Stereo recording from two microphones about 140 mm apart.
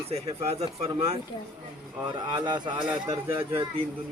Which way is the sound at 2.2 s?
30° right (ahead or behind).